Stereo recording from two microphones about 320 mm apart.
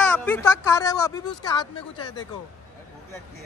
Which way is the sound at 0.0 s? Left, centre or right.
Centre.